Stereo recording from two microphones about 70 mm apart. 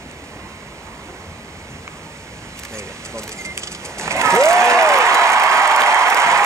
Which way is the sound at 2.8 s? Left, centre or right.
Right.